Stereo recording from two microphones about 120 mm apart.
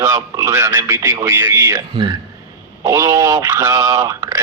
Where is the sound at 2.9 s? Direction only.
25° right (ahead or behind).